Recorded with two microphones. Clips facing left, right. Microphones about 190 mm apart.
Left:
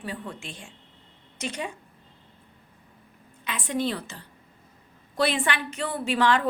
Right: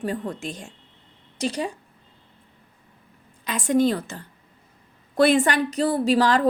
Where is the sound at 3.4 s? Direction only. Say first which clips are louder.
Right 8 dB; 40° right (ahead or behind).